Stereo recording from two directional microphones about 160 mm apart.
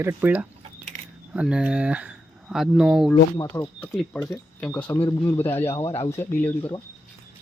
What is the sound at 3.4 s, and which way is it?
Speech, 10° left (ahead or behind).